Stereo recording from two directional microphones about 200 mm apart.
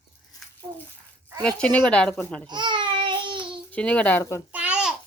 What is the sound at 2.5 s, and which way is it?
Babbling, 25° right (ahead or behind).